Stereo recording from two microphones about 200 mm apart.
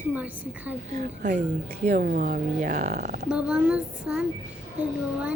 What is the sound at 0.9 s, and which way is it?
Speech, 40° right (ahead or behind).